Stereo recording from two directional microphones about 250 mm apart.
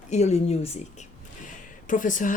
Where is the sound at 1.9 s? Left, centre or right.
Left.